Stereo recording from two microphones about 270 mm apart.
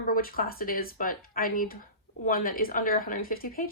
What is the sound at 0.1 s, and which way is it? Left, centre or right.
A woman's voice, left.